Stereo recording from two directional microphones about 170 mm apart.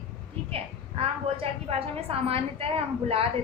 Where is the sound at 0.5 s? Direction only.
35° right (ahead or behind).